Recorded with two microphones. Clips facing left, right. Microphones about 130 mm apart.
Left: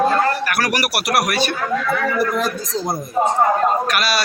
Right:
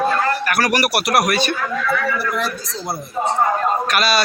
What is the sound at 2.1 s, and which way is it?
Speech, 45° left (ahead or behind).